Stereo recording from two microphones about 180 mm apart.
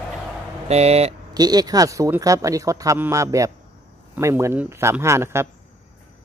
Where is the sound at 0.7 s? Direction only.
35° right (ahead or behind).